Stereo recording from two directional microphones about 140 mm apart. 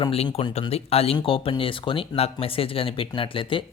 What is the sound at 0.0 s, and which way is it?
Speech, 45° left (ahead or behind).